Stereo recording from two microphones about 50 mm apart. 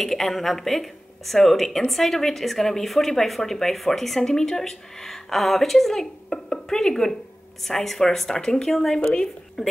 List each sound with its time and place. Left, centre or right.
0.0 s a woman's voice: centre
9.0 s a woman's voice: centre
9.6 s speech: centre